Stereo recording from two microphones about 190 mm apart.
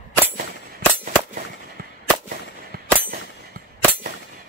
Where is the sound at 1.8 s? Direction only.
55° right (ahead or behind).